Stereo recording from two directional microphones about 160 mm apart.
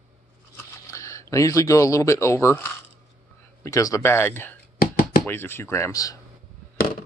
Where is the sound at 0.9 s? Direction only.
20° left (ahead or behind).